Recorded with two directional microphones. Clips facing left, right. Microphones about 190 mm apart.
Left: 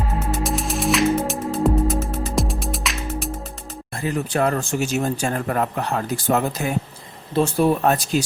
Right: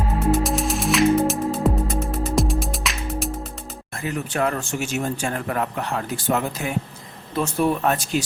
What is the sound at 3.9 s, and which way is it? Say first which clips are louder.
Speech: left 4 dB; 35° left (ahead or behind).